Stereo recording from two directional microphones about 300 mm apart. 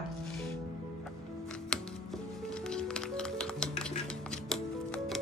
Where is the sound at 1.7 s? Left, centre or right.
Centre.